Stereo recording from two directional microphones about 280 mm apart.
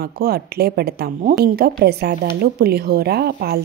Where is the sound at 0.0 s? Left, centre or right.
Right.